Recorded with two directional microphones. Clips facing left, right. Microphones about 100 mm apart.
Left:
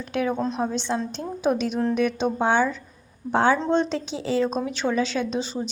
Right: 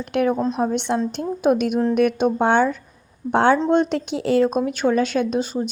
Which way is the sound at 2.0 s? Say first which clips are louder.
Right 5 dB; 55° right (ahead or behind).